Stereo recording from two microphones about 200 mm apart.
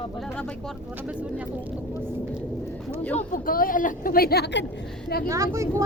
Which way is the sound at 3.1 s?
45° left (ahead or behind).